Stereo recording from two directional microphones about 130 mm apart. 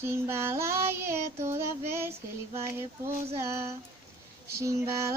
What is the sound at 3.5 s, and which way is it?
Child singing, 20° right (ahead or behind).